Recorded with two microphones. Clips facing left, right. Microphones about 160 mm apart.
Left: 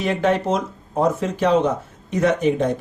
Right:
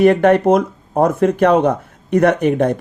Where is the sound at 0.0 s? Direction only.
60° right (ahead or behind).